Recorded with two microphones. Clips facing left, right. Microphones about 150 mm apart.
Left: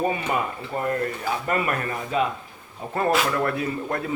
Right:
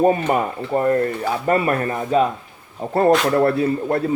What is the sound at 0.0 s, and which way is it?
Speech, 45° right (ahead or behind).